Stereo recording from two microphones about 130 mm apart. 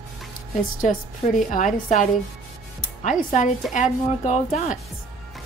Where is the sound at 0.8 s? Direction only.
85° left.